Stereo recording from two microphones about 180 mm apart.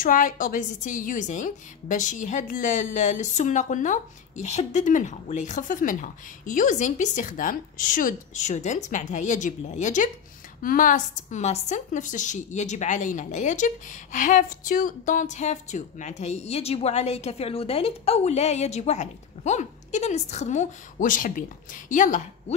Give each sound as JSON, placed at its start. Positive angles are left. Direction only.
{"t": 0.0, "sound": "a woman's voice", "side_deg": 50}